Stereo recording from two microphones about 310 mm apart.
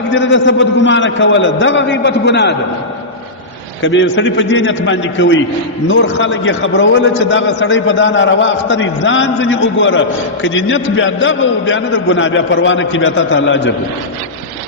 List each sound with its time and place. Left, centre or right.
0.1 s a man's voice: left
3.8 s a man's voice: left